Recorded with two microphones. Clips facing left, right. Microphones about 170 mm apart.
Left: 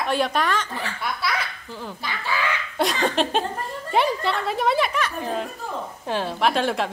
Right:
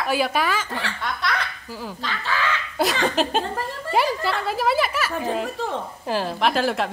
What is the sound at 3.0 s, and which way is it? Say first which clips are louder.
Speech: even; centre (ahead or behind).